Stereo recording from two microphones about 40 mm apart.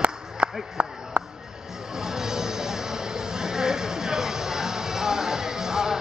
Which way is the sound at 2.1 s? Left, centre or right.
Centre.